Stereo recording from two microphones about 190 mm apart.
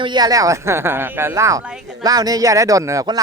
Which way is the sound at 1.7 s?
5° right (ahead or behind).